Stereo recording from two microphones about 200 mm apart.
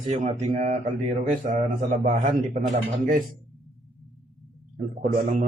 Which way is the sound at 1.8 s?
40° right (ahead or behind).